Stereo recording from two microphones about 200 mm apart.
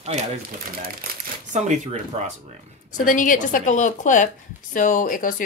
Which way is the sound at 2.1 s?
30° right (ahead or behind).